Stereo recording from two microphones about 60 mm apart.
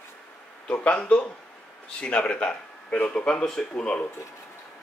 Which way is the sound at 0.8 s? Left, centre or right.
Centre.